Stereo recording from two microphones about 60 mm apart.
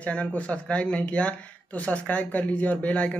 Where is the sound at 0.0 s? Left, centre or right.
Left.